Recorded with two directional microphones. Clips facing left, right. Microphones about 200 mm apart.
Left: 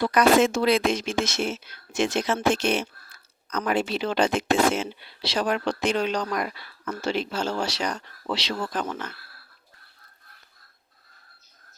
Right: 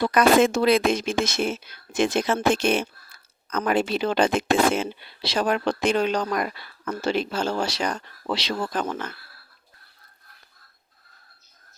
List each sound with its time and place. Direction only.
0.0 s speech: 55° right (ahead or behind)